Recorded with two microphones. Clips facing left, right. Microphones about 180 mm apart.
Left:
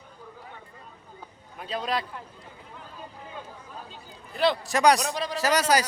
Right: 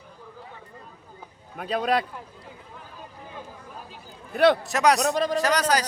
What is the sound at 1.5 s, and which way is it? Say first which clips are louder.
Speech: right 5 dB; 60° right (ahead or behind).